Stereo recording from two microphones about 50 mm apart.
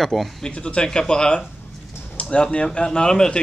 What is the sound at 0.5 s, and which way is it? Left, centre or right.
A man's voice, left.